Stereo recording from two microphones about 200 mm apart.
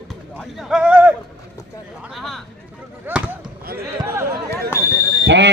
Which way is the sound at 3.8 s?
10° right (ahead or behind).